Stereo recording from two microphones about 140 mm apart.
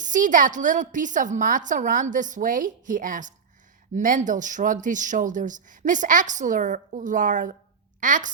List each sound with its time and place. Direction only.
0.0 s a woman's voice: 65° right (ahead or behind)